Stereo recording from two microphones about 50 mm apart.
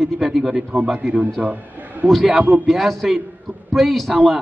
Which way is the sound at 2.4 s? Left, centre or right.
Right.